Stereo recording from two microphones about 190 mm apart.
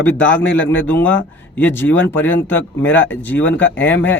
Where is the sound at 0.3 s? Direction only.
10° left (ahead or behind).